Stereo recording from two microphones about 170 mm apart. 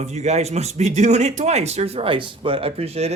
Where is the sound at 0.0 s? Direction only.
40° right (ahead or behind).